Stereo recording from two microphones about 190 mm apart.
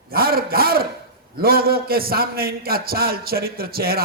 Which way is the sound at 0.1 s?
50° right (ahead or behind).